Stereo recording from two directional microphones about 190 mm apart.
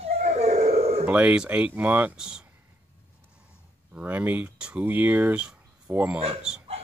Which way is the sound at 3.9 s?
10° right (ahead or behind).